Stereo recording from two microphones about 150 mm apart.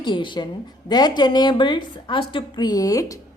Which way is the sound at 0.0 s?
30° left (ahead or behind).